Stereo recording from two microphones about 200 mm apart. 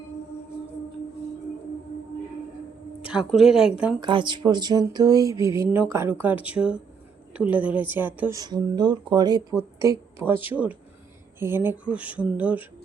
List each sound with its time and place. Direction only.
3.1 s speech: centre (ahead or behind)
4.0 s speech: 25° right (ahead or behind)
8.4 s a woman's voice: 20° right (ahead or behind)